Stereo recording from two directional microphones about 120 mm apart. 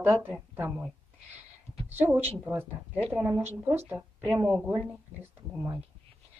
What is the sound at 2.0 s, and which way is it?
Speech, 15° right (ahead or behind).